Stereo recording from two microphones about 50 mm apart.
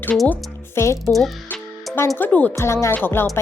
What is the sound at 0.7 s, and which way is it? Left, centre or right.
Speech, left.